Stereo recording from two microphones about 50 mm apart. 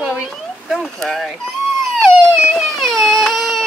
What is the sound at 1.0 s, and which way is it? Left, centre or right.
Speech, centre.